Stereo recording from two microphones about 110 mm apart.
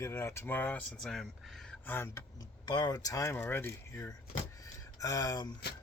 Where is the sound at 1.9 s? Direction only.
20° left (ahead or behind).